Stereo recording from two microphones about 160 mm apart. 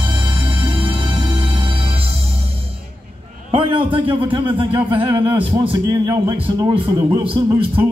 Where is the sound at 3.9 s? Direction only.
30° right (ahead or behind).